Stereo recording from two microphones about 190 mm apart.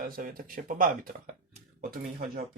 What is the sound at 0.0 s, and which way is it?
Speech, 50° right (ahead or behind).